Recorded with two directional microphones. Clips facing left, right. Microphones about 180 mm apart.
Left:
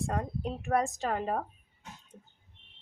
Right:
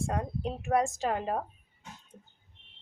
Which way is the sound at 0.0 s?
Centre (ahead or behind).